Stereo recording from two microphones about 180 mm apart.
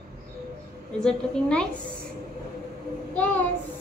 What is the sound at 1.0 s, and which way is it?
Speech, 5° left (ahead or behind).